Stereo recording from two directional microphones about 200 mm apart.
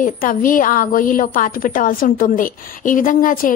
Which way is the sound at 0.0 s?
45° left (ahead or behind).